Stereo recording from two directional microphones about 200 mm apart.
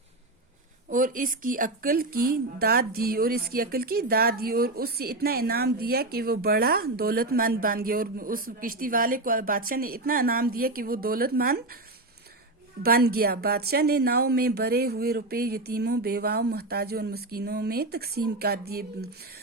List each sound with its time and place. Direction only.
0.9 s speech: 40° right (ahead or behind)
12.8 s speech: 50° right (ahead or behind)